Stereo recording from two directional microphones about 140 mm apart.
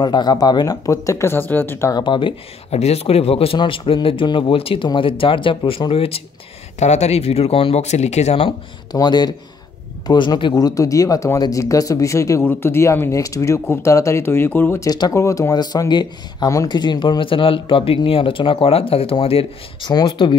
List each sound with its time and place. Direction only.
0.0 s speech: 30° left (ahead or behind)
2.7 s speech: 50° left (ahead or behind)
8.5 s speech: 30° left (ahead or behind)
14.9 s speech: 25° left (ahead or behind)